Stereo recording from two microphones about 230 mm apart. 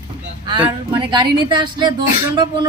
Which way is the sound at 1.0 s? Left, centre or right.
Centre.